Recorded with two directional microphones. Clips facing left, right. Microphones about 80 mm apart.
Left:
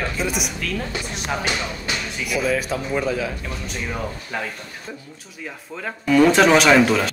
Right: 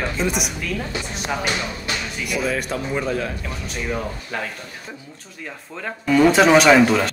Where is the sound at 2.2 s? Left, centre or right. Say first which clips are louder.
Left 2 dB; centre.